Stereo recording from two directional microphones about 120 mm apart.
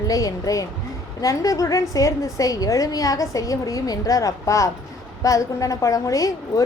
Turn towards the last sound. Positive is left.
turn(degrees=30)  # may be behind; listen again after turning